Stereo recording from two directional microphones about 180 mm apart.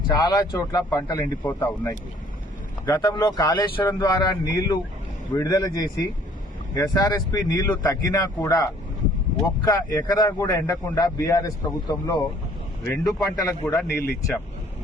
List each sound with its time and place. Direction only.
0.2 s a man's voice: 20° left (ahead or behind)